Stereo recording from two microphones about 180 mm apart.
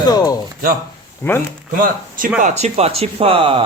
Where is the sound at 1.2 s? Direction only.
15° left (ahead or behind).